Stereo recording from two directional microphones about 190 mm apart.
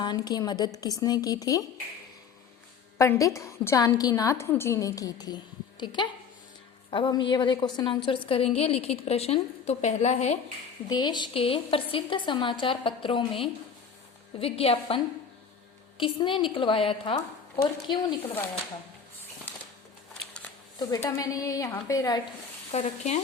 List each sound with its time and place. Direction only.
0.0 s a woman's voice: 20° left (ahead or behind)
3.0 s a woman's voice: 15° left (ahead or behind); by 10.3 s 35° left (ahead or behind)
10.8 s a woman's voice: 20° left (ahead or behind)
20.7 s a woman's voice: 20° left (ahead or behind)
22.7 s a woman's voice: 35° left (ahead or behind)